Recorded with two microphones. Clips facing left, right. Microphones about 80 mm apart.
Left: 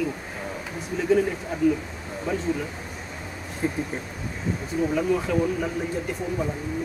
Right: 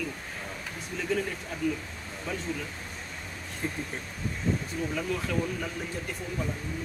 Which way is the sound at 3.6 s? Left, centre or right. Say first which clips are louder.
Left 7 dB; centre.